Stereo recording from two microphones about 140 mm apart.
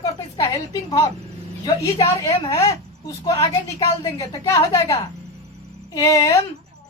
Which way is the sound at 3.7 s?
20° left (ahead or behind).